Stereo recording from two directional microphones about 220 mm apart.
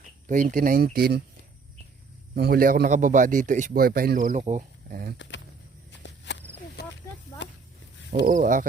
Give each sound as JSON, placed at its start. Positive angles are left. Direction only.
{"t": 0.3, "sound": "a man's voice", "side_deg": -35}
{"t": 2.3, "sound": "a man's voice", "side_deg": -45}
{"t": 5.1, "sound": "speech", "side_deg": 55}
{"t": 6.0, "sound": "walk", "side_deg": 55}
{"t": 6.8, "sound": "a sound", "side_deg": 45}
{"t": 8.2, "sound": "a man's voice", "side_deg": -35}